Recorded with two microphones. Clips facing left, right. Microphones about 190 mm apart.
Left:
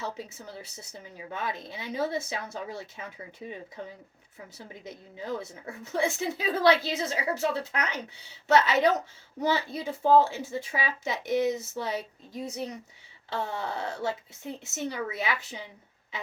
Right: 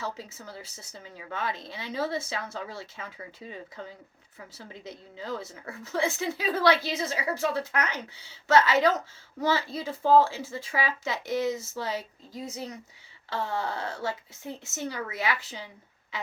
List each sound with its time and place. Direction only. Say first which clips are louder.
1.3 s speech: right 1 dB; 20° left (ahead or behind)